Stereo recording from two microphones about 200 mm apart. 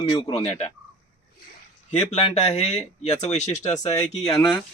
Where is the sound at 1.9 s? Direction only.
35° left (ahead or behind).